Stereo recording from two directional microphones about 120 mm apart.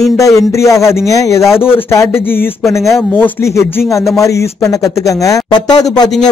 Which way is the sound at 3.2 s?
20° left (ahead or behind).